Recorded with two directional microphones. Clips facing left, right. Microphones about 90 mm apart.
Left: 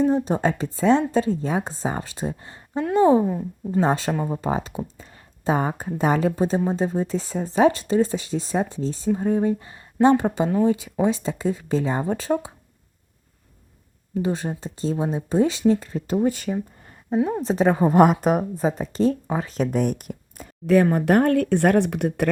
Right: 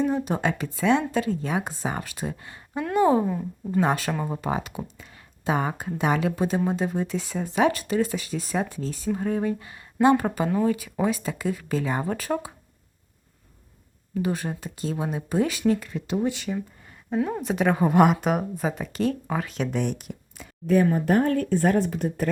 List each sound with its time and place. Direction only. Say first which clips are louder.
0.1 s speech: left 4 dB; 30° left (ahead or behind)
4.1 s speech: left 3 dB; 10° left (ahead or behind)
4.4 s speech: left 3 dB; 30° left (ahead or behind)
14.1 s speech: left 2 dB; 30° left (ahead or behind)
17.4 s speech: left 3 dB; 30° left (ahead or behind); by 20.5 s 50° left (ahead or behind)
20.9 s speech: left 4 dB; 70° left (ahead or behind)